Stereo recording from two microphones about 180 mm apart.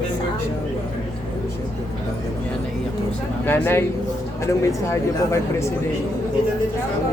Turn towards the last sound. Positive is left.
turn(degrees=15)  # may be behind; listen again after turning